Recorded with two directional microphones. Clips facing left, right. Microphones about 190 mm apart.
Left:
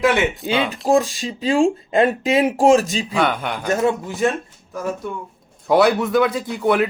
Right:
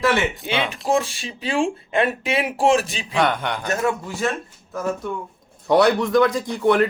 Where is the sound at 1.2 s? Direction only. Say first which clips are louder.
Left 5 dB; 35° left (ahead or behind).